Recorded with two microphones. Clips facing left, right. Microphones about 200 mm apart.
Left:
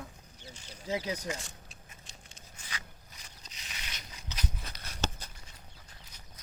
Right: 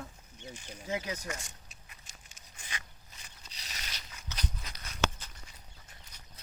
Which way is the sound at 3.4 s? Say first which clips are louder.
Right 1 dB; 35° right (ahead or behind).